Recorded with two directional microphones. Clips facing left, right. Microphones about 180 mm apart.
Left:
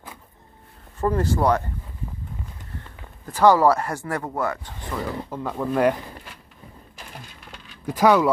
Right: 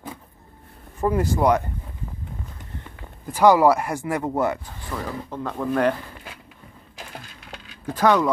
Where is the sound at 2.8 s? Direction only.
15° right (ahead or behind).